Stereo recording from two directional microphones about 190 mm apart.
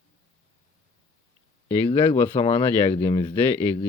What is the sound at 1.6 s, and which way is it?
Speech, 25° left (ahead or behind).